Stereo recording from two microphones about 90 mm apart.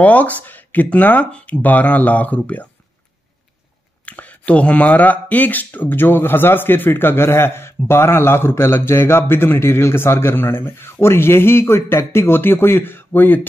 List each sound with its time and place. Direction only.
0.0 s speech: 15° left (ahead or behind)
4.0 s speech: 15° left (ahead or behind)